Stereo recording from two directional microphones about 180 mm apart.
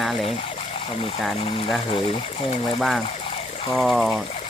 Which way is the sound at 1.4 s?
30° left (ahead or behind).